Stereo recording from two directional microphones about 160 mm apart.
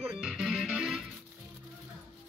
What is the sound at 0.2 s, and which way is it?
Music, 5° right (ahead or behind).